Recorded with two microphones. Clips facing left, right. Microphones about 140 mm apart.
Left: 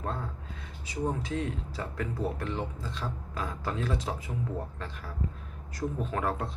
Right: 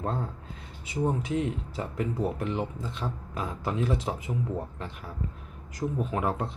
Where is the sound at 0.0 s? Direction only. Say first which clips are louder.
Right 4 dB; 30° right (ahead or behind).